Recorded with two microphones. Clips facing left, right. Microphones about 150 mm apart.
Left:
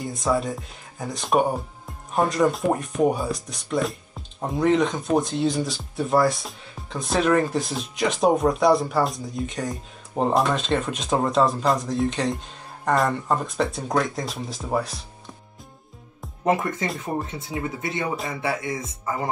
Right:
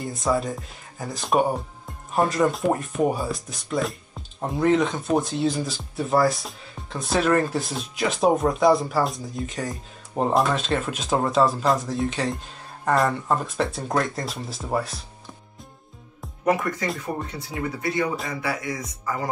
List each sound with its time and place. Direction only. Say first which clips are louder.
0.0 s speech: even; centre (ahead or behind)
16.4 s speech: even; 25° left (ahead or behind)